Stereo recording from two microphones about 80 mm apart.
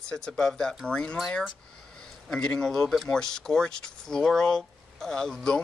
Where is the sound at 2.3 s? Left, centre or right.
Centre.